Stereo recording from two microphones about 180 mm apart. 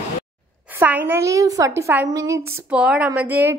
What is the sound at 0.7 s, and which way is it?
A woman's voice, 10° right (ahead or behind).